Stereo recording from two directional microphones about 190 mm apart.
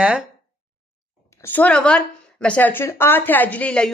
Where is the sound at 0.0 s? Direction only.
5° right (ahead or behind).